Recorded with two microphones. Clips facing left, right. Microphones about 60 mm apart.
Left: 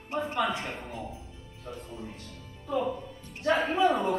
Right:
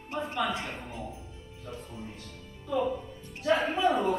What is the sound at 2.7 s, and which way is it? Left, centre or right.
Music, centre.